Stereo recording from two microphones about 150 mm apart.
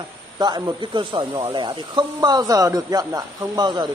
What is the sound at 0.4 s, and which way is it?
Speech, 25° right (ahead or behind).